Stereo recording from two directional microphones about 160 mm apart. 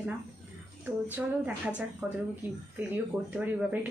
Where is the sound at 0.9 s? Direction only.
10° right (ahead or behind).